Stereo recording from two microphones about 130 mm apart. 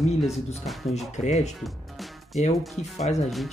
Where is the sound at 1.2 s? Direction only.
60° left (ahead or behind).